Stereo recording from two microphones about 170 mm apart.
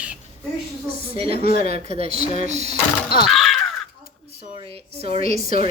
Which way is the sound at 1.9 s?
35° right (ahead or behind).